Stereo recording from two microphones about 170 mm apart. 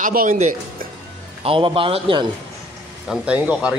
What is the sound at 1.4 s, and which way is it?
Speech, 30° right (ahead or behind).